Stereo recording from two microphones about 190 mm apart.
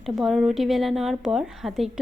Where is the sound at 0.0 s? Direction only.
Centre (ahead or behind).